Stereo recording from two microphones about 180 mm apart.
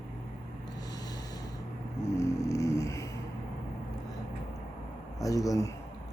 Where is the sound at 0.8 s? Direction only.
20° left (ahead or behind).